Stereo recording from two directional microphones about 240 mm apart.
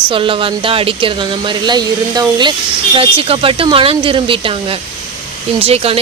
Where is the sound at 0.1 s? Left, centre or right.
Right.